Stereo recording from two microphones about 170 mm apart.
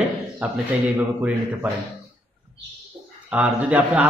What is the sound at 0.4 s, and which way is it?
A man's voice, 5° right (ahead or behind).